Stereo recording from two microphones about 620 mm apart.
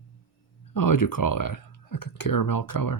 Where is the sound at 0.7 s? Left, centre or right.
Left.